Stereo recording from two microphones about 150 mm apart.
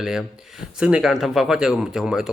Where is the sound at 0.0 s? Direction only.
5° right (ahead or behind).